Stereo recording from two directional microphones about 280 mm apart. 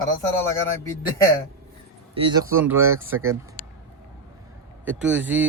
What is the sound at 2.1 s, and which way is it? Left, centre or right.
Speech, centre.